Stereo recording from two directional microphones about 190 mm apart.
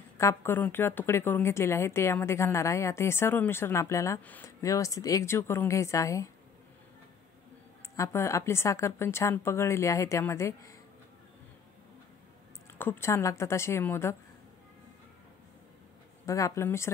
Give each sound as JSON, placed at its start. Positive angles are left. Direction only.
{"t": 0.2, "sound": "a woman's voice", "side_deg": 15}
{"t": 7.9, "sound": "a woman's voice", "side_deg": 15}
{"t": 12.7, "sound": "a woman's voice", "side_deg": 10}
{"t": 16.3, "sound": "a woman's voice", "side_deg": 15}